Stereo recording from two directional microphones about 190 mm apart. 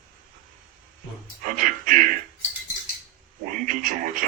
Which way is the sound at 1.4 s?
45° right (ahead or behind).